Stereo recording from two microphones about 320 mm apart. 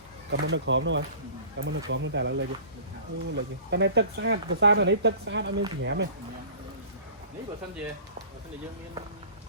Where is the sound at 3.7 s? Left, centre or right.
Right.